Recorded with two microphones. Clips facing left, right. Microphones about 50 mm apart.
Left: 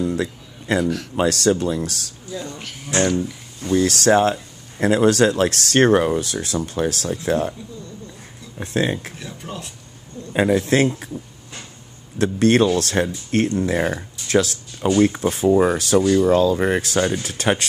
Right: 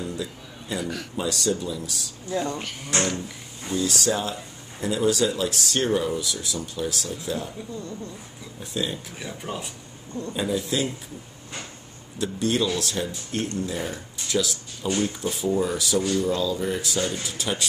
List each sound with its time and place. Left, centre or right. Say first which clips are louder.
0.1 s a sound: left 8 dB; left
0.7 s speech: left 8 dB; centre
1.1 s speech: left 8 dB; left
2.3 s speech: right 4 dB; right
2.6 s speech: left 6 dB; centre
3.7 s speech: left 9 dB; left
8.5 s speech: left 8 dB; left
9.2 s speech: even; centre
10.3 s speech: left 9 dB; left
12.2 s speech: left 8 dB; left